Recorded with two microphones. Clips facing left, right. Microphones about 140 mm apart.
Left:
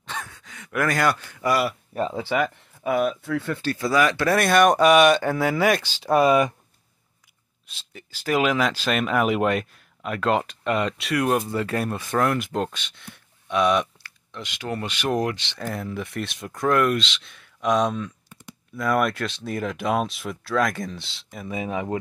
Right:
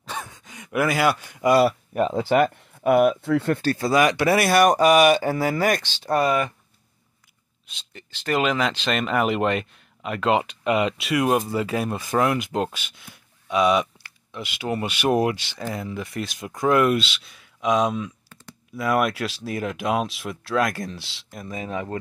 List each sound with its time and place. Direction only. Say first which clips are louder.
0.1 s gasp: right 1 dB; 15° right (ahead or behind)
2.9 s speech: right 5 dB; 60° right (ahead or behind)
3.2 s speech: right 5 dB; 25° right (ahead or behind)
3.9 s speech: right 1 dB; 15° right (ahead or behind); by 6.5 s 15° left (ahead or behind)
7.6 s speech: left 1 dB; 5° left (ahead or behind)
21.5 s speech: left 2 dB; 10° left (ahead or behind)